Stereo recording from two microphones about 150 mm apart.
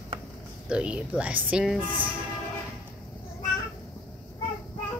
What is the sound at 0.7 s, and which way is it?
Speech, 5° right (ahead or behind).